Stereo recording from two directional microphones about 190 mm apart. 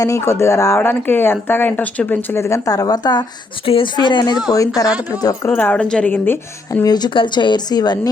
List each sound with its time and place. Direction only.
0.0 s a woman's voice: 15° left (ahead or behind)